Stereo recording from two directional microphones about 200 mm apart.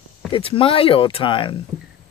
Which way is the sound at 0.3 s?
25° left (ahead or behind).